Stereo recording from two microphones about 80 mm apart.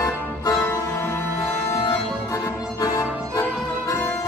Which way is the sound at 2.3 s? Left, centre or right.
Left.